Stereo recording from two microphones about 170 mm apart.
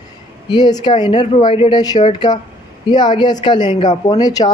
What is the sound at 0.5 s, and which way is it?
Speech, 25° left (ahead or behind).